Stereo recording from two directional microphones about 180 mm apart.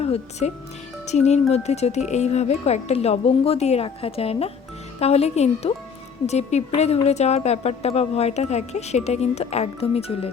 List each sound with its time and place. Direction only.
0.0 s speech: 35° left (ahead or behind)